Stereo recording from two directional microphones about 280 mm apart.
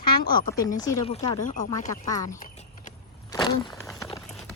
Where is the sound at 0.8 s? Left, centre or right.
Centre.